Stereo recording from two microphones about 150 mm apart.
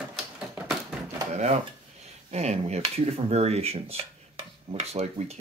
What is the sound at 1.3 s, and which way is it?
Speech, 50° right (ahead or behind).